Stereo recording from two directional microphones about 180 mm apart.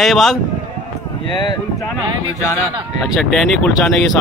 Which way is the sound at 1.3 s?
25° left (ahead or behind).